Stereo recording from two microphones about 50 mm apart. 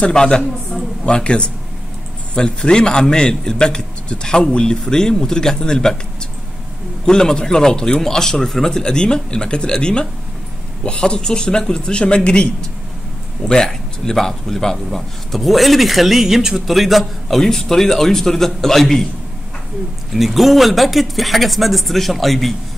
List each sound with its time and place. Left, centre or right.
0.0 s a man's voice: centre
7.1 s a man's voice: centre
20.1 s speech: centre